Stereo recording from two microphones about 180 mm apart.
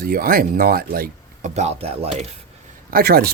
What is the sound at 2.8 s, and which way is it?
Speech, 55° right (ahead or behind).